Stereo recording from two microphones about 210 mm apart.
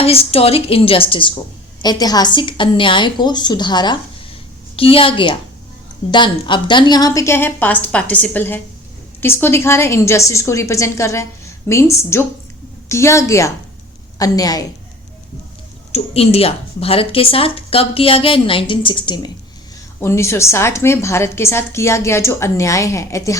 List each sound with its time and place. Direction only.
0.0 s a woman's voice: 30° left (ahead or behind)
15.9 s a woman's voice: 30° left (ahead or behind)